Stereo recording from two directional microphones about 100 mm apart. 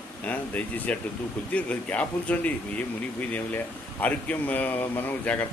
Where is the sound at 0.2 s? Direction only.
15° left (ahead or behind).